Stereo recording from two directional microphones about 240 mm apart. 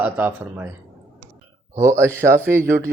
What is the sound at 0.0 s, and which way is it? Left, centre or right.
Speech, centre.